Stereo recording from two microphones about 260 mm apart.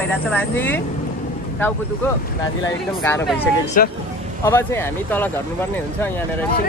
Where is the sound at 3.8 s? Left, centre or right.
Left.